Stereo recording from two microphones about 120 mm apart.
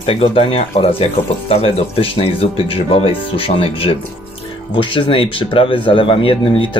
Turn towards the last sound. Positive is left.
turn(degrees=45)  # may be behind; listen again after turning